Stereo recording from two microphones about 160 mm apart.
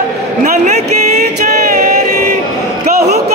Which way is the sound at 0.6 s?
45° right (ahead or behind).